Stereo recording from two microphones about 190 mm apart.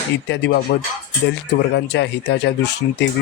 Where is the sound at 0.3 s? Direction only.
70° left (ahead or behind).